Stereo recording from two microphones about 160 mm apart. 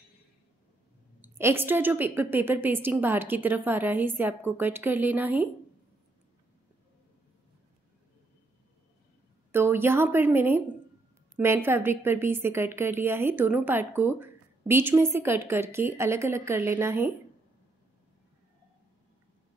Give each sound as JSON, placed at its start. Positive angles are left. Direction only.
{"t": 1.2, "sound": "a woman's voice", "side_deg": -15}
{"t": 9.5, "sound": "a woman's voice", "side_deg": -15}